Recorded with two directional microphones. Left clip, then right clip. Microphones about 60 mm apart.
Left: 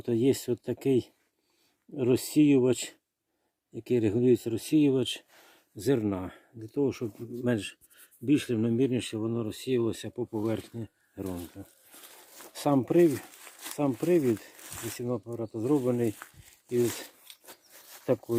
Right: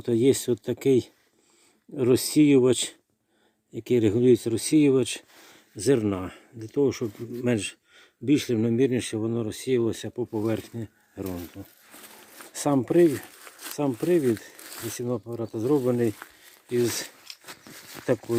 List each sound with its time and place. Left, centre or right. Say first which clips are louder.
0.0 s speech: right 5 dB; centre
8.5 s speech: right 4 dB; centre
12.4 s a sound: right 2 dB; centre
13.1 s speech: right 3 dB; centre
13.7 s speech: right 2 dB; centre
14.7 s zipper: right 3 dB; left
14.9 s speech: right 3 dB; centre
16.6 s speech: right 3 dB; centre